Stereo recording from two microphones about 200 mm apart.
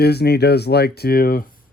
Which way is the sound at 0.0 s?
55° left (ahead or behind).